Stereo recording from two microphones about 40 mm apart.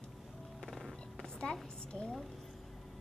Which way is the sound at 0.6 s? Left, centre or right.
Centre.